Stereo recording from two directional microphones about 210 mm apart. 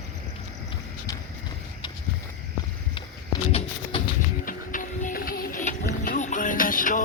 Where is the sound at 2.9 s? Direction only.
25° left (ahead or behind).